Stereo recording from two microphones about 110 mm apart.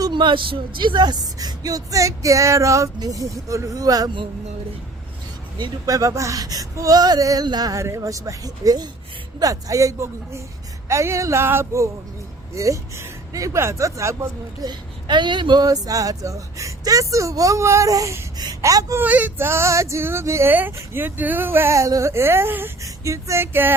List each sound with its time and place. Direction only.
0.0 s speech: 45° right (ahead or behind)
5.5 s speech: 35° right (ahead or behind)
14.7 s speech: 45° right (ahead or behind)
19.0 s speech: 15° right (ahead or behind)